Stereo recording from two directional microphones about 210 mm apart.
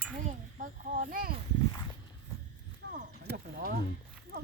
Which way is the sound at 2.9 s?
55° right (ahead or behind).